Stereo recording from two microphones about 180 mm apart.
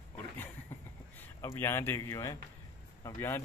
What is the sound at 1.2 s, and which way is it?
A man's voice, 15° left (ahead or behind).